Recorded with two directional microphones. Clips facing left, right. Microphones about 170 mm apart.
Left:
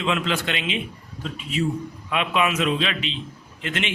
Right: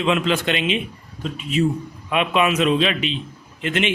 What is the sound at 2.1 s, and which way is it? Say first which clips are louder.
A man's voice: right 4 dB; 20° right (ahead or behind).